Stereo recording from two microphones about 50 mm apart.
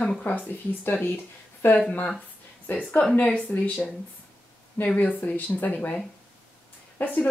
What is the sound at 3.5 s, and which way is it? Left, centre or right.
Speech, left.